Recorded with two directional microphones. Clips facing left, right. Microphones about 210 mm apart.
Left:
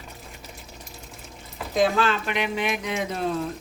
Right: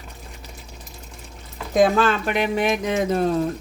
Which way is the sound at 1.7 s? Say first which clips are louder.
Right 4 dB; 50° right (ahead or behind).